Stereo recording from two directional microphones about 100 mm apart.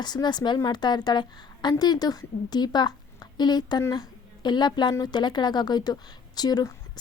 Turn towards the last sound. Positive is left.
turn(degrees=40)  # may be behind; listen again after turning